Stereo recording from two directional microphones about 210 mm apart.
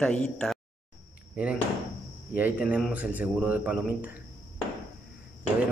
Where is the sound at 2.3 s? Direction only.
5° right (ahead or behind).